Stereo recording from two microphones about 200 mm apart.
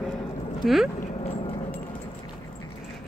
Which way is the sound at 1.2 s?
30° left (ahead or behind).